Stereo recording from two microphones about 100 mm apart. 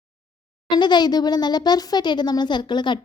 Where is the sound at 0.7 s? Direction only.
45° left (ahead or behind).